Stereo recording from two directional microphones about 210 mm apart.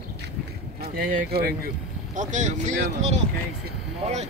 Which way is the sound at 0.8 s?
45° right (ahead or behind).